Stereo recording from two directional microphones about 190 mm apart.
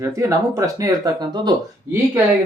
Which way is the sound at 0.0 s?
15° right (ahead or behind).